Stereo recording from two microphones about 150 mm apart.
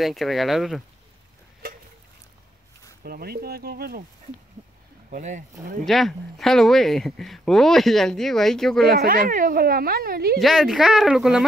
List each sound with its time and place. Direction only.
0.0 s speech: centre (ahead or behind)
3.0 s speech: 90° right
5.1 s speech: 60° right (ahead or behind)
5.9 s speech: centre (ahead or behind)
8.8 s speech: 85° right
10.4 s speech: centre (ahead or behind)